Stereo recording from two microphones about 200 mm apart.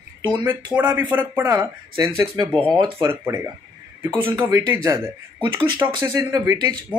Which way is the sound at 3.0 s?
15° right (ahead or behind).